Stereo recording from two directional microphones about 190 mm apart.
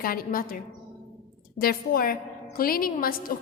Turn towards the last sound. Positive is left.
turn(degrees=50)  # may be behind; listen again after turning